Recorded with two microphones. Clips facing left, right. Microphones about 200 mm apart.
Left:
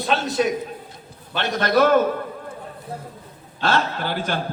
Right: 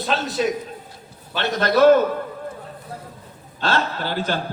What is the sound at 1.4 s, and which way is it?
Speech, 50° left (ahead or behind).